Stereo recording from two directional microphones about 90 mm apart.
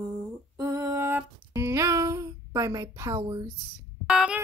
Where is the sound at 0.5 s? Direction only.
35° right (ahead or behind).